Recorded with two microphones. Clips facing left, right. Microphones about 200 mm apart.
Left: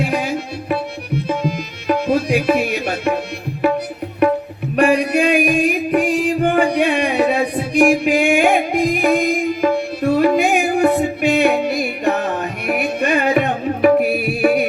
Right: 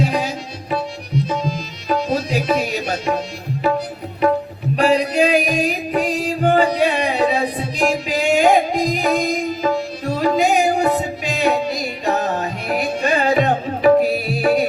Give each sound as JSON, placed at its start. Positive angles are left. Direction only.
{"t": 0.0, "sound": "tabla", "side_deg": 60}
{"t": 1.9, "sound": "tabla", "side_deg": 60}
{"t": 4.8, "sound": "music", "side_deg": 60}